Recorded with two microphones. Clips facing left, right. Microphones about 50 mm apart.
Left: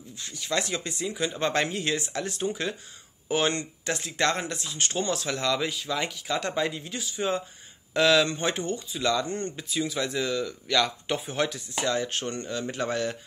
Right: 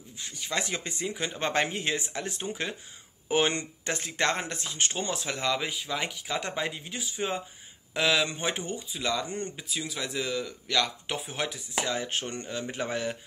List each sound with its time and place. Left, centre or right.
0.2 s speech: right
3.9 s speech: right
4.8 s speech: right
9.7 s speech: centre